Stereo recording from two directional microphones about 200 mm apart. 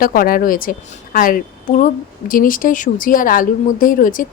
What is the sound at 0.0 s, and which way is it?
A woman's voice, 45° left (ahead or behind).